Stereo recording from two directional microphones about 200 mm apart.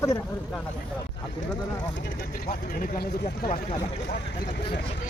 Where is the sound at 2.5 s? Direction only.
40° left (ahead or behind).